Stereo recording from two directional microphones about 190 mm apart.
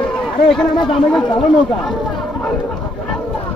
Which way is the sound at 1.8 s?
Centre (ahead or behind).